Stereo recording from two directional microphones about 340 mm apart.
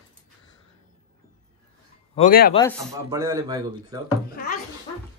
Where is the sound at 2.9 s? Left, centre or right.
Centre.